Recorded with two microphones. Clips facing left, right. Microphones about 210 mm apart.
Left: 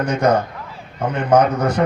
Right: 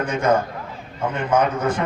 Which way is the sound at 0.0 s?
40° left (ahead or behind).